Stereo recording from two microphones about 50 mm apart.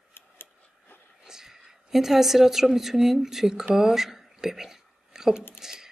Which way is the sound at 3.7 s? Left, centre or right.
Centre.